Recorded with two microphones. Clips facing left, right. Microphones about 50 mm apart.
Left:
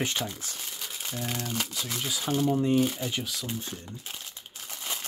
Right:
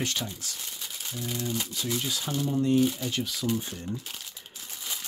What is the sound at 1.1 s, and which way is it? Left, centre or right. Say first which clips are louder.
Speech: right 1 dB; left.